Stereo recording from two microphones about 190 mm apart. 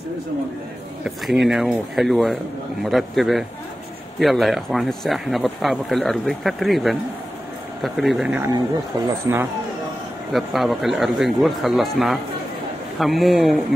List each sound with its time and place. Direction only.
1.0 s speech: centre (ahead or behind)
9.3 s speech: 15° right (ahead or behind)
10.3 s speech: centre (ahead or behind)